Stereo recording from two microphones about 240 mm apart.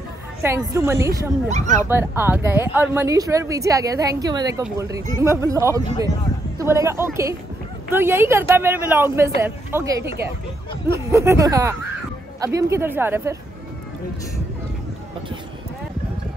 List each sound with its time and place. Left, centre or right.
0.4 s speech: centre
1.5 s speech: right
1.9 s speech: centre